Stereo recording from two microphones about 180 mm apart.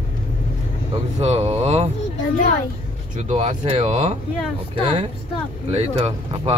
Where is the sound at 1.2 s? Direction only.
35° right (ahead or behind).